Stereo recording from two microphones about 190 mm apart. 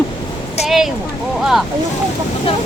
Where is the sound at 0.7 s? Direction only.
Centre (ahead or behind).